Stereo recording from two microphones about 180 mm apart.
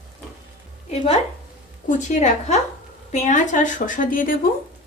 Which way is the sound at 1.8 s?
40° left (ahead or behind).